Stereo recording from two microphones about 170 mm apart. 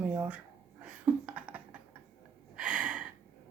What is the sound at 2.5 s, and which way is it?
Gasp, 5° right (ahead or behind).